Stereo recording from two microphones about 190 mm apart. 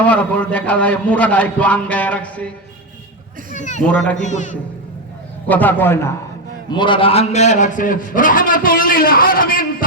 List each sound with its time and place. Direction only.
0.0 s a man's voice: 5° left (ahead or behind)
3.5 s speech: 40° left (ahead or behind)
3.8 s speech: 5° left (ahead or behind)
4.2 s a man's voice: 40° left (ahead or behind)
5.5 s a man's voice: 10° left (ahead or behind)
6.7 s a man's voice: 25° left (ahead or behind); by 9.6 s 50° left (ahead or behind)